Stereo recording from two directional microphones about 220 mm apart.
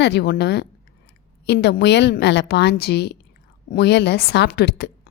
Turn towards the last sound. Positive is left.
turn(degrees=50)  # may be behind; listen again after turning